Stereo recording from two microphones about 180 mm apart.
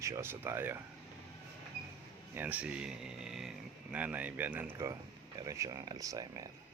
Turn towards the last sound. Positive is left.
turn(degrees=-20)  # may be behind; listen again after turning